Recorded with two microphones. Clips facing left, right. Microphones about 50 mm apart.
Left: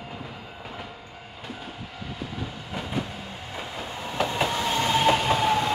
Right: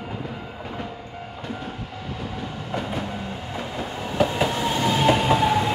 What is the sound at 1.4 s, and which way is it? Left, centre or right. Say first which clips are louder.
Train: right 5 dB; centre.